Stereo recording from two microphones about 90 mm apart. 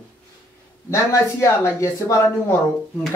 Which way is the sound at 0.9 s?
35° left (ahead or behind).